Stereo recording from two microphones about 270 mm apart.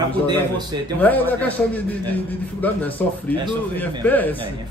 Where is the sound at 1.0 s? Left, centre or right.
Centre.